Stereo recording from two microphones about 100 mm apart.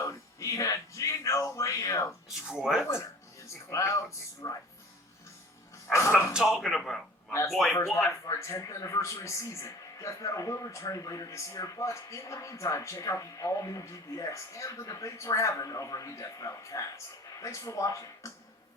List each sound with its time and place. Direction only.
0.0 s speech: 30° left (ahead or behind)
2.5 s speech: 5° right (ahead or behind)
2.8 s speech: 30° left (ahead or behind)
6.3 s speech: 5° right (ahead or behind)
7.3 s speech: 30° left (ahead or behind)
7.5 s speech: centre (ahead or behind)
8.2 s speech: 30° left (ahead or behind)